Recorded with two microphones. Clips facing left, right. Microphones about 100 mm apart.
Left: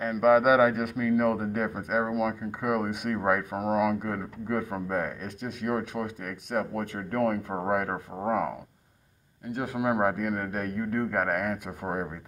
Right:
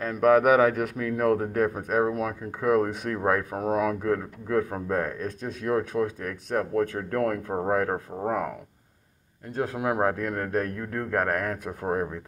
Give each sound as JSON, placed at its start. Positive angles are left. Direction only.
{"t": 0.0, "sound": "speech", "side_deg": 10}
{"t": 8.1, "sound": "speech", "side_deg": 5}
{"t": 9.6, "sound": "speech", "side_deg": 10}